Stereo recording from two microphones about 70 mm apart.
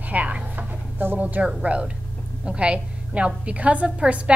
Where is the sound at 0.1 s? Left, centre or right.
Right.